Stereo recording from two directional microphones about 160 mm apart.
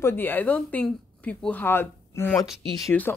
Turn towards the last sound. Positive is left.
turn(degrees=10)  # may be behind; listen again after turning